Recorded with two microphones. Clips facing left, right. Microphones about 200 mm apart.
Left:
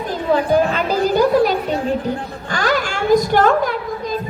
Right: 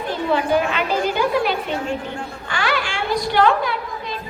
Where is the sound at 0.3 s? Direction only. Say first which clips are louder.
Left 4 dB; 40° left (ahead or behind).